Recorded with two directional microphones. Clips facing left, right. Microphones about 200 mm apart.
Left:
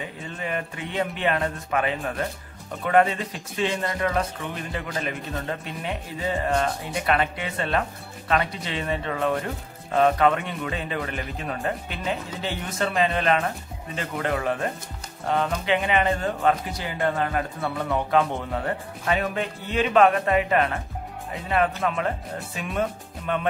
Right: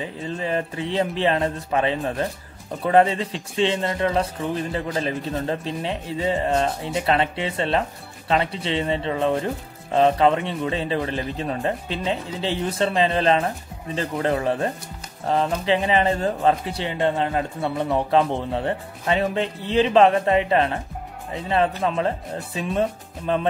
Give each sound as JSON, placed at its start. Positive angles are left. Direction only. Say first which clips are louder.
{"t": 0.0, "sound": "a man's voice", "louder": "right 5 dB", "side_deg": -30}